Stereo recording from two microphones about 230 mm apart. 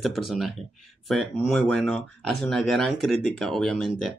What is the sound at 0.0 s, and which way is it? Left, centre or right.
Speech, centre.